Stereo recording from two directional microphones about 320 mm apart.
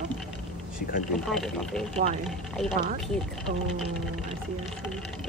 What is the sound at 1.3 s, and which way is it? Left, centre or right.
Speech, centre.